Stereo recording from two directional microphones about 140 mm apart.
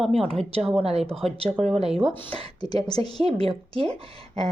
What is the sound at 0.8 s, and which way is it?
Speech, 45° right (ahead or behind).